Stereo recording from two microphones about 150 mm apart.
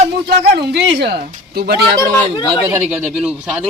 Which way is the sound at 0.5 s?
90° right.